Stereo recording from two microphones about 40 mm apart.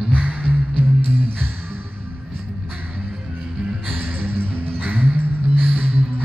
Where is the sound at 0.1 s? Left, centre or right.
Right.